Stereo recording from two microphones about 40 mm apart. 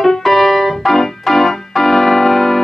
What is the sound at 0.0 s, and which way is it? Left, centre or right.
Keyboard, centre.